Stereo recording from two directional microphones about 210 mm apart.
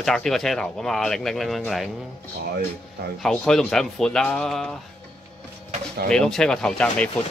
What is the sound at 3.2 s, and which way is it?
Speech, centre (ahead or behind).